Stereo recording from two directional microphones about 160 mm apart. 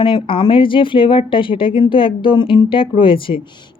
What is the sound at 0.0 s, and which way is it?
Speech, 30° left (ahead or behind).